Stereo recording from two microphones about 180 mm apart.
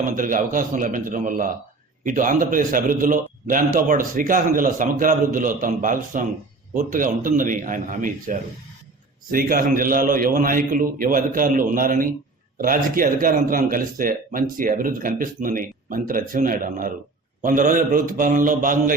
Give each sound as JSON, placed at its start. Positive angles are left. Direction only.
{"t": 0.1, "sound": "speech", "side_deg": -50}